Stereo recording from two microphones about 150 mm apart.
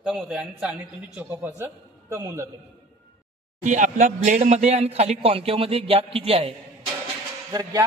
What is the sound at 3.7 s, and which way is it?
Speech, 55° right (ahead or behind).